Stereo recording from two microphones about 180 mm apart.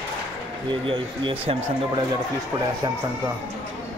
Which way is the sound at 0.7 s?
30° right (ahead or behind).